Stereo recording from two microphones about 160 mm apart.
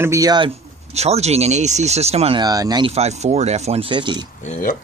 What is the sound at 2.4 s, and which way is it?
Speech, 25° right (ahead or behind).